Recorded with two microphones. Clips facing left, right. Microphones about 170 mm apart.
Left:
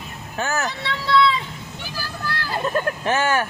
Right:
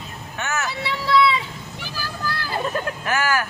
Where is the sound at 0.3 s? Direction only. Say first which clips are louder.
Left 3 dB; 35° left (ahead or behind).